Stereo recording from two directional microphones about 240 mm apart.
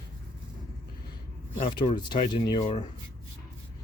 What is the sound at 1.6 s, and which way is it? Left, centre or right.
Speech, left.